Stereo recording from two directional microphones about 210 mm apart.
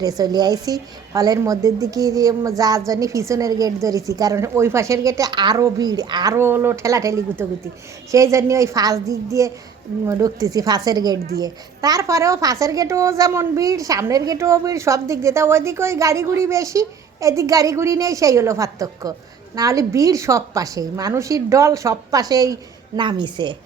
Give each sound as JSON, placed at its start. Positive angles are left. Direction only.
{"t": 0.0, "sound": "a child's voice", "side_deg": -15}